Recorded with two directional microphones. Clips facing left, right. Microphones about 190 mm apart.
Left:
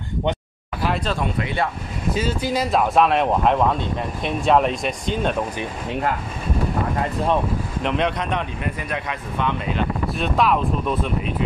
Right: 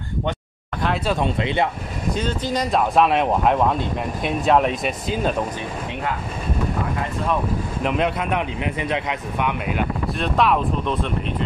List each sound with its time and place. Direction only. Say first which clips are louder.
1.2 s speech: right 2 dB; 20° right (ahead or behind)
2.1 s speech: left 1 dB; 5° left (ahead or behind)
7.8 s speech: right 1 dB; 5° right (ahead or behind)
8.7 s speech: right 4 dB; 20° right (ahead or behind)
10.1 s speech: right 1 dB; centre (ahead or behind)